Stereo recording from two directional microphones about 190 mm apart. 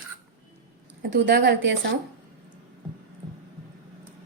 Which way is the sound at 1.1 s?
70° right (ahead or behind).